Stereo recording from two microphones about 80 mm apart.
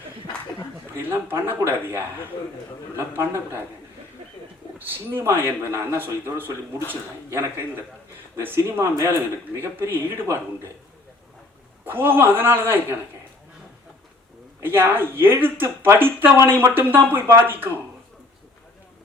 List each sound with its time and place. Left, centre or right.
1.0 s speech: right
4.8 s a man's voice: right
11.9 s a man's voice: right
14.6 s a man's voice: right